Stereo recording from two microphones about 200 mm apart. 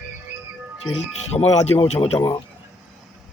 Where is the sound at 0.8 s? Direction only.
90° left.